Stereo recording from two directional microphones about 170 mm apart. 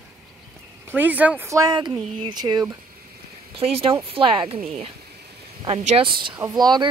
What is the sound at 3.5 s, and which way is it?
Speech, 35° right (ahead or behind).